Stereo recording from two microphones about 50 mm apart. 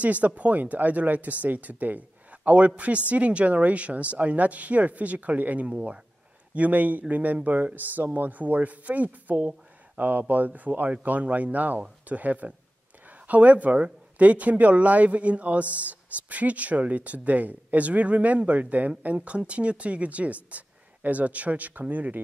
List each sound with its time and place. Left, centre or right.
0.0 s speech: right